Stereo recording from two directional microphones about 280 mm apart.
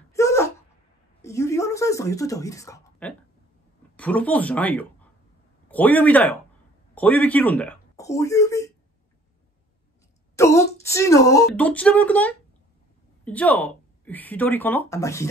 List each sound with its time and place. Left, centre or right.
0.1 s wail: centre
1.2 s speech: centre
10.3 s speech: centre